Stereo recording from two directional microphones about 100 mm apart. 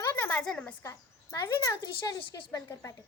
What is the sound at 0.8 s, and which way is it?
A woman's voice, 30° left (ahead or behind).